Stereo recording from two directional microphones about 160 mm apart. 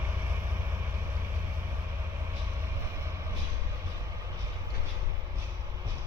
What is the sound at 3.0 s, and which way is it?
Train, 20° right (ahead or behind).